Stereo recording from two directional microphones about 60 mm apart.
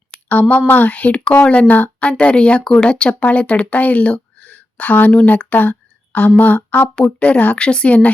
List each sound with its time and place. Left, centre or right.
0.3 s speech: left